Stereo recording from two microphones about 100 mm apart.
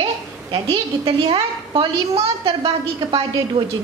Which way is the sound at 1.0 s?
65° right (ahead or behind).